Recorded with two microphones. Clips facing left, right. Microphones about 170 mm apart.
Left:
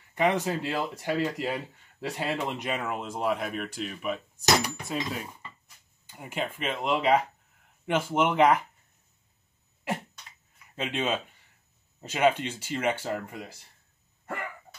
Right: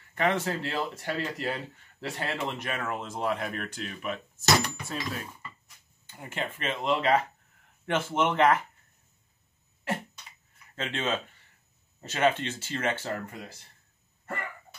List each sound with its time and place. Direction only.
0.1 s speech: 15° left (ahead or behind)
6.0 s speech: 10° left (ahead or behind)
10.8 s speech: 15° left (ahead or behind)
14.2 s hiccup: 10° left (ahead or behind)